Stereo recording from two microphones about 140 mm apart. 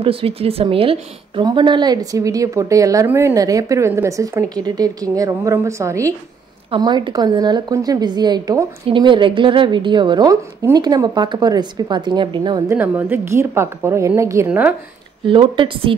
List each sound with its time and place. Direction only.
0.0 s a woman's voice: 40° right (ahead or behind)
12.6 s a woman's voice: 15° right (ahead or behind)
15.2 s a woman's voice: 35° right (ahead or behind)